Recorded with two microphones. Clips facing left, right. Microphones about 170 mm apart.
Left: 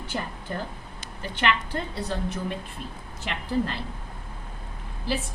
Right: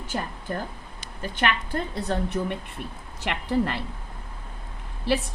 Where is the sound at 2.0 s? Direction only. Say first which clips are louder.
Right 3 dB; 60° right (ahead or behind).